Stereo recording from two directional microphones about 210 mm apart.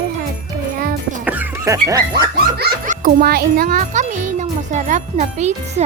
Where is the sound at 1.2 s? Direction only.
10° right (ahead or behind).